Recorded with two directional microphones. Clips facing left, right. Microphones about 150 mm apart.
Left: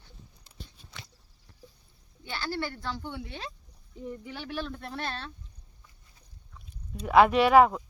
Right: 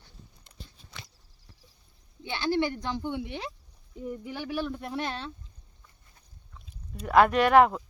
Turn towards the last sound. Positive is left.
turn(degrees=0)  # may be behind; listen again after turning